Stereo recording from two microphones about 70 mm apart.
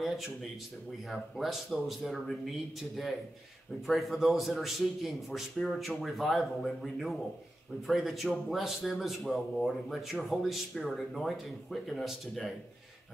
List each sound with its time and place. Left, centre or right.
0.0 s a man's voice: centre
3.8 s a man's voice: centre